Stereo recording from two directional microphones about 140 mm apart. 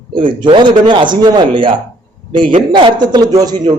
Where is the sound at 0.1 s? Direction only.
35° right (ahead or behind).